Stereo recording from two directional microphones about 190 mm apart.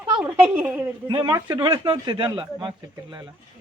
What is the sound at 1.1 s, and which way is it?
Speech, 25° right (ahead or behind).